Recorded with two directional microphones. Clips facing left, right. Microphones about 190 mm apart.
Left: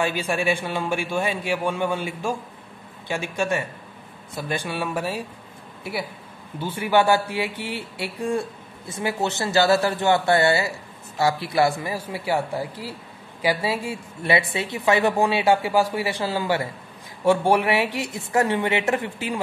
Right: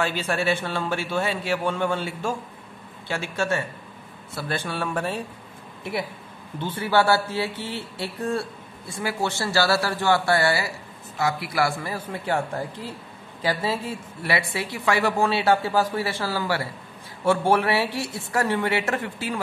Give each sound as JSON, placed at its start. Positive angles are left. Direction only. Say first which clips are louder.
{"t": 0.0, "sound": "speech", "louder": "left 1 dB", "side_deg": 15}
{"t": 6.6, "sound": "speech", "louder": "left 2 dB", "side_deg": 10}